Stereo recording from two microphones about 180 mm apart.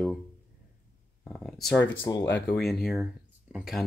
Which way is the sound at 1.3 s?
Centre (ahead or behind).